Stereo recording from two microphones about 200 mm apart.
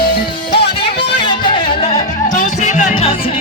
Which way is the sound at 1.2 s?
25° left (ahead or behind).